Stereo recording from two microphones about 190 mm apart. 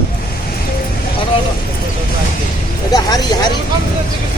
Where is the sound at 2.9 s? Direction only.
20° left (ahead or behind).